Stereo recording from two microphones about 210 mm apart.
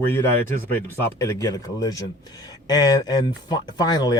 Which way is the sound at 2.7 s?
20° left (ahead or behind).